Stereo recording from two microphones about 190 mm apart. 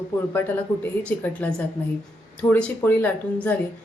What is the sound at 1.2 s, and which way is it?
A woman's voice, 5° left (ahead or behind).